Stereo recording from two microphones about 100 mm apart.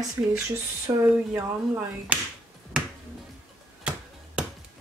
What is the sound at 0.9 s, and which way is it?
Speech, 25° right (ahead or behind).